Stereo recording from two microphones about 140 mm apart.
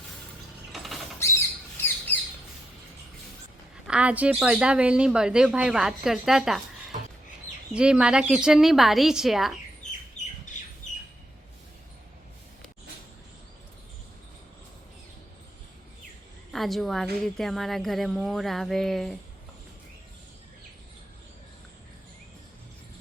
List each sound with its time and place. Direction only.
0.7 s mechanisms: centre (ahead or behind)
2.1 s squawk: 15° left (ahead or behind)
3.8 s speech: 10° right (ahead or behind)
7.7 s a woman's voice: 5° right (ahead or behind)
10.2 s squawk: 55° left (ahead or behind)
16.5 s a woman's voice: centre (ahead or behind)